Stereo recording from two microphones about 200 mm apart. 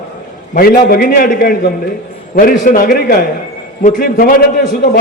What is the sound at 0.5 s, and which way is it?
A man's voice, 45° left (ahead or behind).